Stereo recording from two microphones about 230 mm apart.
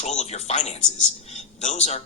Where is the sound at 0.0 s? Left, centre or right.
Left.